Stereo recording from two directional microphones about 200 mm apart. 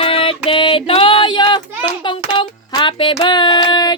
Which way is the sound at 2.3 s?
20° left (ahead or behind).